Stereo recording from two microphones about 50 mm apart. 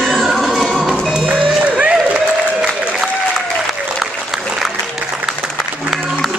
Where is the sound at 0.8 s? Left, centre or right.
Centre.